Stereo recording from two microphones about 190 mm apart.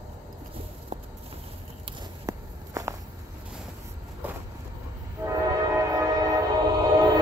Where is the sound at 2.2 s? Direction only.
20° right (ahead or behind).